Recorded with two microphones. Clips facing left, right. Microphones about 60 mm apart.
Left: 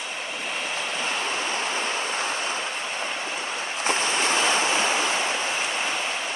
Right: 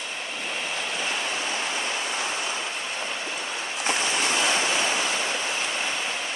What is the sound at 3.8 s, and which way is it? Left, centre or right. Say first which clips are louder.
Waves: left 2 dB; left.